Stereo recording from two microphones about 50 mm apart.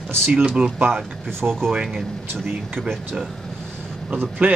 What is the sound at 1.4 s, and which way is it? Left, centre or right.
Speech, right.